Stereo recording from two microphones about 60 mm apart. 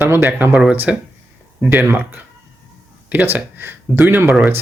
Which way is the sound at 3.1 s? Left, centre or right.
Right.